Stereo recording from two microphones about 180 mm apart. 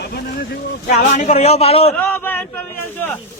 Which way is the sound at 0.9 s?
45° left (ahead or behind).